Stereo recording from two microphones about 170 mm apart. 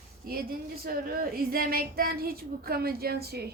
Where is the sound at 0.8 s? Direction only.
60° right (ahead or behind).